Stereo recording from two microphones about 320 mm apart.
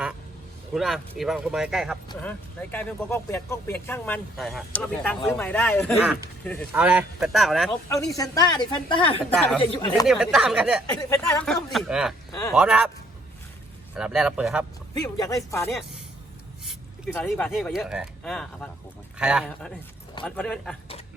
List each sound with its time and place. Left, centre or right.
0.7 s speech: centre
7.7 s speech: centre
9.3 s speech: centre
9.6 s speech: centre
10.1 s speech: centre
10.8 s speech: centre
12.3 s speech: centre
12.5 s speech: centre
13.9 s speech: centre
15.0 s speech: centre
17.2 s speech: centre